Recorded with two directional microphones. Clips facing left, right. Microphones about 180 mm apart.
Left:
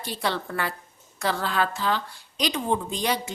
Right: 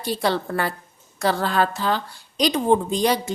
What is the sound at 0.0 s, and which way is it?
A woman's voice, 35° right (ahead or behind).